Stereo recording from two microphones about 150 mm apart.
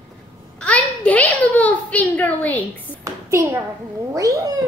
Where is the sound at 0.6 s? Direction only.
10° left (ahead or behind).